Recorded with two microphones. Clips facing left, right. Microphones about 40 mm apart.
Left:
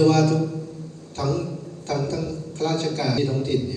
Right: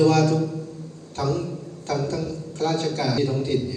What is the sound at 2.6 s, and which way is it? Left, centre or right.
Speech, right.